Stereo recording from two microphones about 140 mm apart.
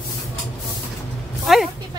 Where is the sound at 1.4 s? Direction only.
Centre (ahead or behind).